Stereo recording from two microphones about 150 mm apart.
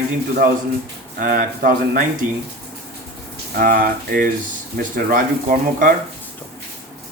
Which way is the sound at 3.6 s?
80° right.